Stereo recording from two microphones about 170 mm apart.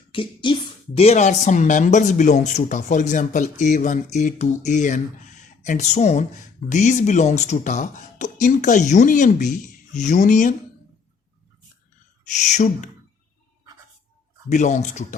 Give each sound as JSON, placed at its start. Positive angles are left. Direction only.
{"t": 0.1, "sound": "speech", "side_deg": 30}
{"t": 12.2, "sound": "speech", "side_deg": 45}
{"t": 14.5, "sound": "speech", "side_deg": 45}